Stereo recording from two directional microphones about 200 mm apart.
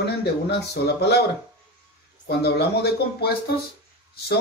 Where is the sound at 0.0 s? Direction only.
55° left (ahead or behind).